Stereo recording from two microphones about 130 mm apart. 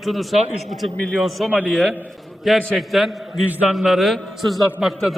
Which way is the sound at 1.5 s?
10° right (ahead or behind).